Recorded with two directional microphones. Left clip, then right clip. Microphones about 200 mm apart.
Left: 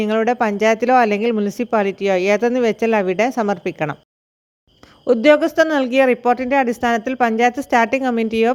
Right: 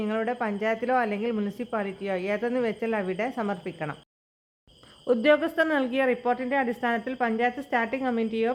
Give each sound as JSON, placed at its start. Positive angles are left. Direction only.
{"t": 0.0, "sound": "speech", "side_deg": 40}
{"t": 5.0, "sound": "speech", "side_deg": 30}